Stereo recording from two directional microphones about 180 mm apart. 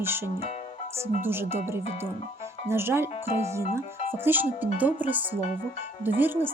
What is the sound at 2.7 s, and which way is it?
Speech, 15° right (ahead or behind).